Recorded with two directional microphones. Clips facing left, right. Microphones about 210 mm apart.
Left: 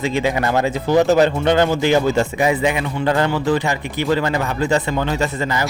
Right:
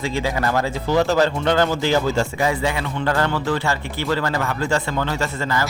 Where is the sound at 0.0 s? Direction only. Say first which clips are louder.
Left 3 dB; 20° left (ahead or behind).